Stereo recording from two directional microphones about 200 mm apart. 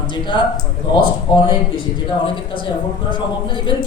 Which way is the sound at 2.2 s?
25° left (ahead or behind).